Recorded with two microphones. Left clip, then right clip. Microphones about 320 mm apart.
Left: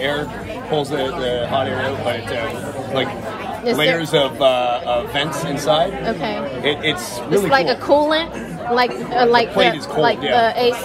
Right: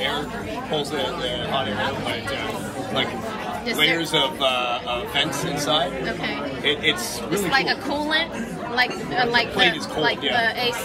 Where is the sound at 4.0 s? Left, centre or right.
Left.